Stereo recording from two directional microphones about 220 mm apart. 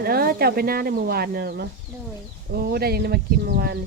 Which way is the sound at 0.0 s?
45° right (ahead or behind).